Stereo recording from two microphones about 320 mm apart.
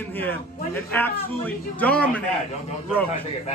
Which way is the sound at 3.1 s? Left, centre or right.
Centre.